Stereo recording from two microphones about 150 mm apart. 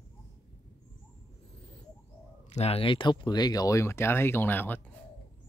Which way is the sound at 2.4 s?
40° left (ahead or behind).